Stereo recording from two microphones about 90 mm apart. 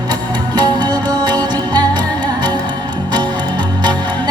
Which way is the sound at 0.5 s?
50° right (ahead or behind).